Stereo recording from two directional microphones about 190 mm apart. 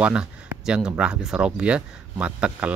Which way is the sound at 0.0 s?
5° right (ahead or behind).